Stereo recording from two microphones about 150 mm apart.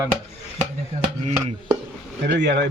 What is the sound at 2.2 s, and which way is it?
Speech, 90° right.